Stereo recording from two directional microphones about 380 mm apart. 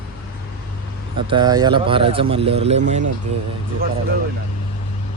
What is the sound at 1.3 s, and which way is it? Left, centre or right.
Speech, centre.